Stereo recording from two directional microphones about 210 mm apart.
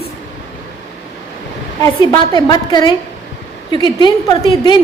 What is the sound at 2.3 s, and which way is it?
A woman's voice, 20° left (ahead or behind).